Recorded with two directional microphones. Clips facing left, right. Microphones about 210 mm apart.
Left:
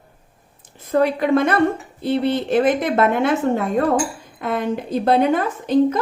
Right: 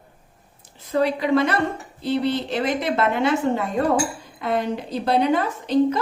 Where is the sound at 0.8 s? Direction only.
50° left (ahead or behind).